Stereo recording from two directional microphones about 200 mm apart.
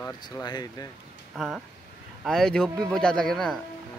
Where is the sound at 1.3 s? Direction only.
Centre (ahead or behind).